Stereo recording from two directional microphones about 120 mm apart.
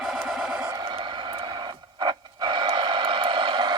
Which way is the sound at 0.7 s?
40° right (ahead or behind).